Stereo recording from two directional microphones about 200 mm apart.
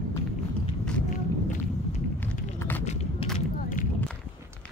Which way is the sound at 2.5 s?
10° left (ahead or behind).